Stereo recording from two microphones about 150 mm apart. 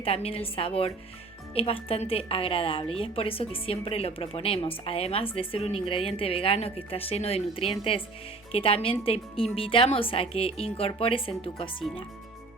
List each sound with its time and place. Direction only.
0.0 s a woman's voice: 40° left (ahead or behind)